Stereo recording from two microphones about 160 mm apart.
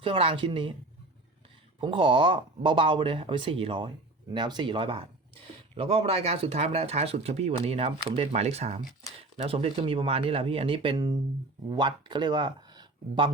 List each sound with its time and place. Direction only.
0.0 s speech: 35° right (ahead or behind)
1.8 s speech: 35° right (ahead or behind)
10.9 s speech: 20° right (ahead or behind)